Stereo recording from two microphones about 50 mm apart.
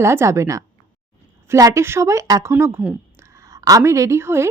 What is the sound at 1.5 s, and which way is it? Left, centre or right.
Speech, right.